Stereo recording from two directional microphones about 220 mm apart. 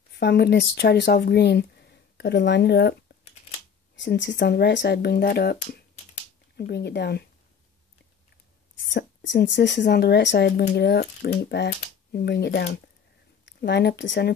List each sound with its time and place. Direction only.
0.2 s speech: 50° left (ahead or behind)
8.9 s speech: 55° left (ahead or behind)